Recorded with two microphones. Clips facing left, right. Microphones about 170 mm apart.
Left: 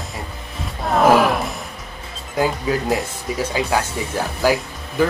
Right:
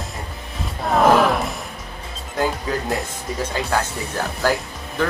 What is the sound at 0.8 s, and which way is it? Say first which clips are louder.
Speech: left 1 dB; centre (ahead or behind).